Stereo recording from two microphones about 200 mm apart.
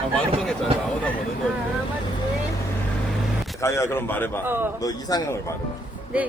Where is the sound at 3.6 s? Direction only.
15° left (ahead or behind).